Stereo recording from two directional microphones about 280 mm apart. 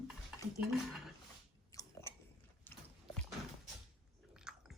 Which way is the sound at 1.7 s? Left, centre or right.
Centre.